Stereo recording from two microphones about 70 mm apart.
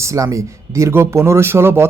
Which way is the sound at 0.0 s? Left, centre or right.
Right.